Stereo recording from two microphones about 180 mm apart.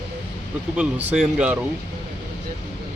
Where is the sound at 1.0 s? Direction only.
5° right (ahead or behind).